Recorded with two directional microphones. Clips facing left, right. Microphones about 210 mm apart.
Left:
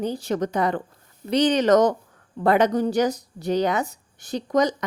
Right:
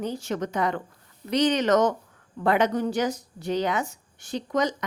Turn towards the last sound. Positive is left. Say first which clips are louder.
# left 4 dB
turn(degrees=40)  # may be behind; listen again after turning